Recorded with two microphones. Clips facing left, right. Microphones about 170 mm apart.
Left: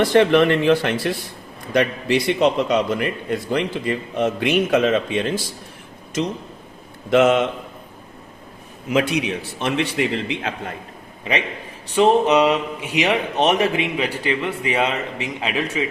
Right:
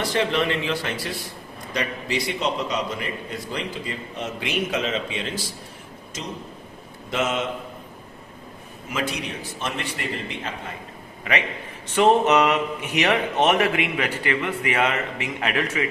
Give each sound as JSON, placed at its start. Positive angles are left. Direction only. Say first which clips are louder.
{"t": 0.0, "sound": "a man's voice", "louder": "left 9 dB", "side_deg": 60}
{"t": 7.1, "sound": "a man's voice", "louder": "left 10 dB", "side_deg": 60}
{"t": 8.9, "sound": "a man's voice", "louder": "left 8 dB", "side_deg": 65}
{"t": 11.9, "sound": "speech", "louder": "left 2 dB", "side_deg": 10}